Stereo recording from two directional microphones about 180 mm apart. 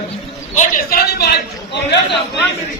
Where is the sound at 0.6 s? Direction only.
55° left (ahead or behind); by 2.0 s 70° left (ahead or behind).